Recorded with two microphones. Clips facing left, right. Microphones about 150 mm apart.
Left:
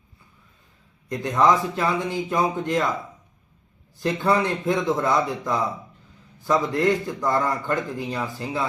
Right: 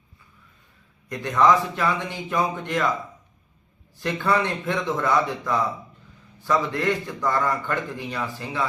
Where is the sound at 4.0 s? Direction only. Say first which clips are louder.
Left 2 dB; 30° left (ahead or behind).